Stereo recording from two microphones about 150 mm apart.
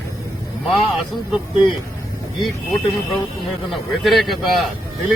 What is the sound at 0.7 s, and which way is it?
Speech, centre (ahead or behind).